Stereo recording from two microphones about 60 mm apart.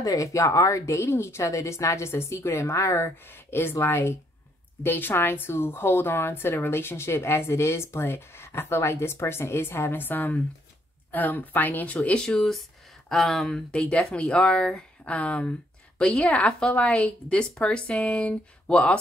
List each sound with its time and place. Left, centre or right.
0.0 s speech: left
0.9 s a woman's voice: left
3.3 s a woman's voice: left
12.3 s a woman's voice: centre